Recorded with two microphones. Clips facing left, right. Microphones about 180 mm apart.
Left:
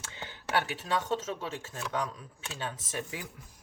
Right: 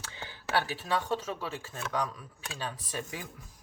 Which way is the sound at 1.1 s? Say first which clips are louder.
Even; 25° left (ahead or behind).